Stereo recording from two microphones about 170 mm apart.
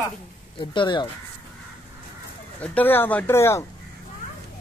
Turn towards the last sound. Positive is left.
turn(degrees=15)  # may be behind; listen again after turning